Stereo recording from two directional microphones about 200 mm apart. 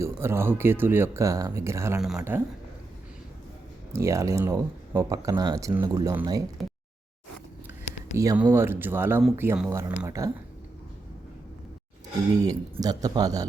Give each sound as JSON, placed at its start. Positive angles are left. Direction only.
{"t": 0.0, "sound": "speech", "side_deg": -15}
{"t": 3.9, "sound": "speech", "side_deg": -15}
{"t": 8.1, "sound": "speech", "side_deg": -15}
{"t": 12.4, "sound": "speech", "side_deg": -20}